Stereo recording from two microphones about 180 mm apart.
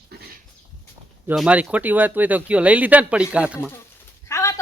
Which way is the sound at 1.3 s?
10° right (ahead or behind).